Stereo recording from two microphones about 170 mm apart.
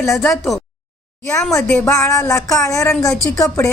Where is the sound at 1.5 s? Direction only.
10° left (ahead or behind).